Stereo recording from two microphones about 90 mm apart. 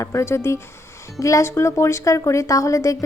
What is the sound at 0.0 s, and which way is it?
A woman's voice, 35° left (ahead or behind).